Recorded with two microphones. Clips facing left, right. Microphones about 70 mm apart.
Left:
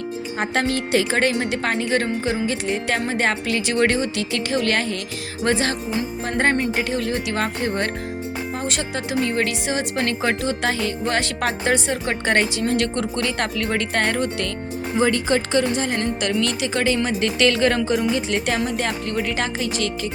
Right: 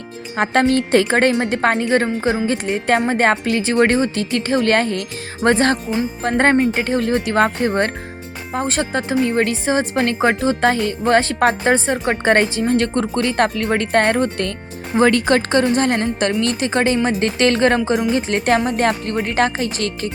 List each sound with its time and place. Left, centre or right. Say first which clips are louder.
0.7 s speech: right 5 dB; right
14.9 s speech: right 5 dB; right
15.4 s speech: right 4 dB; right
16.4 s speech: right 4 dB; right